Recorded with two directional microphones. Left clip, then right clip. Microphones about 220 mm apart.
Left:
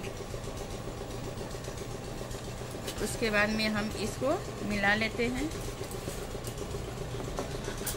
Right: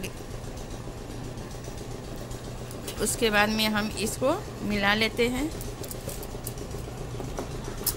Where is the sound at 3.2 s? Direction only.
40° right (ahead or behind).